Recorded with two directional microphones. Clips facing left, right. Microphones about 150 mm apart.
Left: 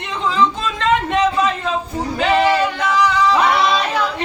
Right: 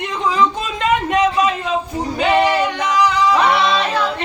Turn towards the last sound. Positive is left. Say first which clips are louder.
# even
turn(degrees=-15)  # may be behind; listen again after turning